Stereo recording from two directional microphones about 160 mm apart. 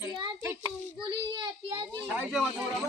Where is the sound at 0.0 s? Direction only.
20° right (ahead or behind).